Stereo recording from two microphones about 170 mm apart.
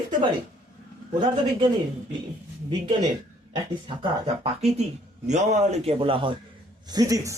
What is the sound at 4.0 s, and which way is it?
A man's voice, 40° right (ahead or behind).